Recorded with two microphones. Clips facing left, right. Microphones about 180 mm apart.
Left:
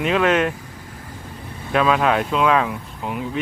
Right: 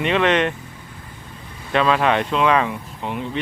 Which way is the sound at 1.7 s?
5° left (ahead or behind).